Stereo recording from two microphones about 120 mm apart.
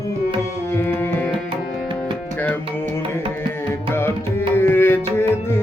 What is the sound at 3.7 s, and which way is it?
Music, 20° left (ahead or behind).